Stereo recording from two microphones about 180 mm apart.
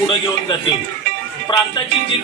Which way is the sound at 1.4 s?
25° left (ahead or behind).